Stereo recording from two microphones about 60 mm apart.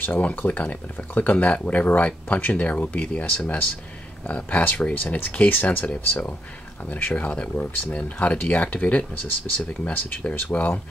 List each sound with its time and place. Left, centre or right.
0.2 s speech: left
5.9 s speech: left